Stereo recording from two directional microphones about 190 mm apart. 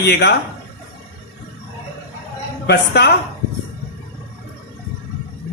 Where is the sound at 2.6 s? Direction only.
60° left (ahead or behind).